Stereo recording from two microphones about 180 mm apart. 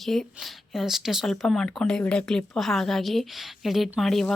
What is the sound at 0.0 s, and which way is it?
Speech, centre (ahead or behind).